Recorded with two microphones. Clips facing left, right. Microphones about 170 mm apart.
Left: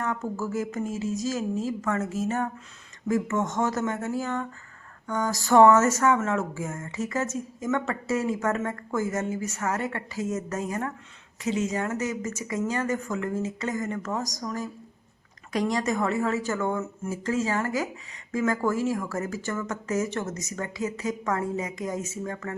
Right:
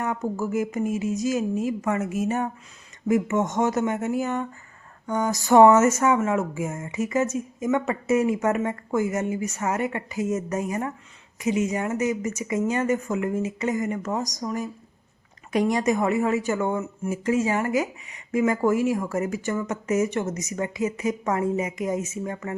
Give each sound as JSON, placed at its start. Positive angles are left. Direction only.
{"t": 0.0, "sound": "a woman's voice", "side_deg": -15}